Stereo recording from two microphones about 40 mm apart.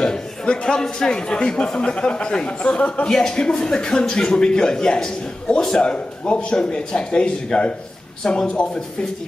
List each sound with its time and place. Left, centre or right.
0.0 s a man's voice: centre
3.1 s a man's voice: centre
5.8 s a man's voice: left